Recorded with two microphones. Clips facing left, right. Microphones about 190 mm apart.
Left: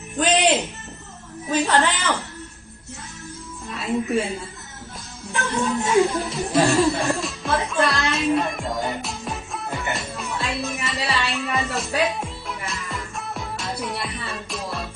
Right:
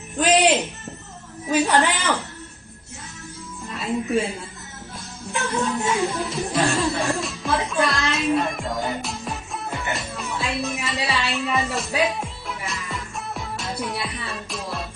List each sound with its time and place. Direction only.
0.2 s a man's voice: centre (ahead or behind)
1.5 s a woman's voice: 15° right (ahead or behind)
3.7 s a woman's voice: centre (ahead or behind)
5.3 s a woman's voice: centre (ahead or behind)
6.9 s music: centre (ahead or behind)